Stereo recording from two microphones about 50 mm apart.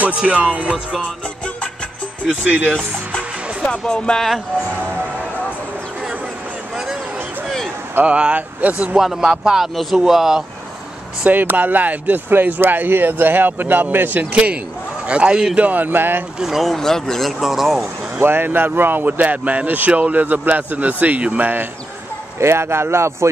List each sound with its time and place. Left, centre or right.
0.3 s speech: right
2.4 s speech: right
3.8 s speech: centre
7.4 s a sound: centre
8.0 s speech: right
8.9 s speech: centre
11.2 s a man's voice: right
12.3 s a man's voice: right
15.5 s a man's voice: right
16.3 s speech: centre
16.7 s speech: centre
18.2 s a man's voice: right
22.4 s speech: right